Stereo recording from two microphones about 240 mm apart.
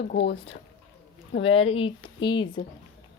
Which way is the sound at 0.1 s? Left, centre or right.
Left.